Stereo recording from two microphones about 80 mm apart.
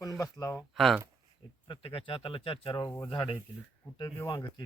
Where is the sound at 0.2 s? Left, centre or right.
Left.